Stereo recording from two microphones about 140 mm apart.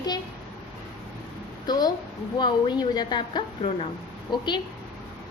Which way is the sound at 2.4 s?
30° left (ahead or behind).